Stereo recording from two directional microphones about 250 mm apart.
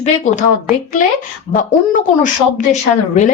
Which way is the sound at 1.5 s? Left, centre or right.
Left.